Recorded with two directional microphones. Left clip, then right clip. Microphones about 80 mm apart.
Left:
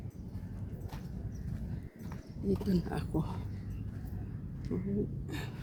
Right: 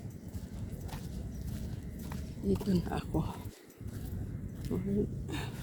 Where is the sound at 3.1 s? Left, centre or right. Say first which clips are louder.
Even; left.